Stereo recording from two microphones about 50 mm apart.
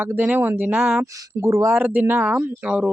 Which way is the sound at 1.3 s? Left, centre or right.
Right.